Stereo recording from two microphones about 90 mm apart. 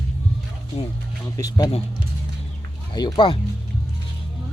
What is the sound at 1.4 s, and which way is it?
Speech, 45° left (ahead or behind).